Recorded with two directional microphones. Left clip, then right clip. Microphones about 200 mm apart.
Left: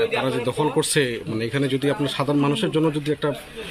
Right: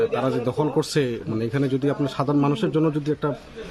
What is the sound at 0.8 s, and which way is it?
A man's voice, 50° right (ahead or behind).